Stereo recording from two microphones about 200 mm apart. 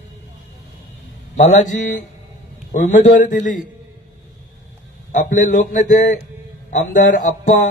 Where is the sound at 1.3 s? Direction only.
40° left (ahead or behind).